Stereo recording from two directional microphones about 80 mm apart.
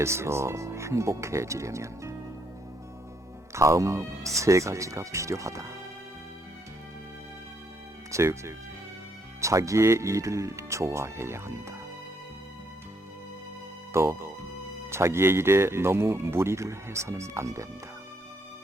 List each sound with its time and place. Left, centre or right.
0.0 s speech: right
3.5 s speech: right
8.1 s speech: right
13.9 s speech: right